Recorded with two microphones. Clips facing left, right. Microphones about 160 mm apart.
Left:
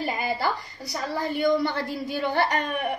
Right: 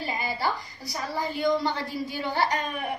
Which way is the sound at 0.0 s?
60° left (ahead or behind).